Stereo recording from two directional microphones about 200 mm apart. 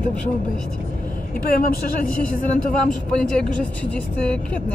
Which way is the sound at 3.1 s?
5° left (ahead or behind).